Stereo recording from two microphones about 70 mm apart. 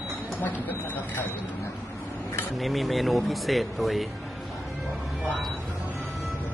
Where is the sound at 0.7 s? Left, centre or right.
Left.